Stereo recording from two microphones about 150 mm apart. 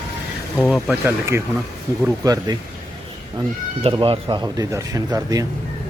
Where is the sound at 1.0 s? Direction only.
15° right (ahead or behind).